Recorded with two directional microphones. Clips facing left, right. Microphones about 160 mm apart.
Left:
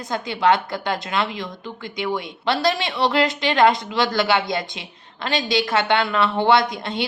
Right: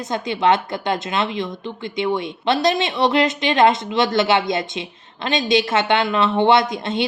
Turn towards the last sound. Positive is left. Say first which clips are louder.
# right 2 dB
turn(degrees=-20)  # may be behind; listen again after turning